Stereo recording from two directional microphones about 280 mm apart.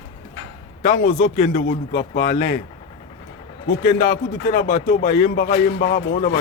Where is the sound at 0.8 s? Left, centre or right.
Left.